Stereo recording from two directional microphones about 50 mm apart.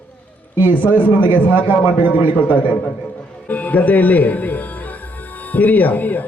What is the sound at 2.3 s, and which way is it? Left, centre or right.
A man's voice, left.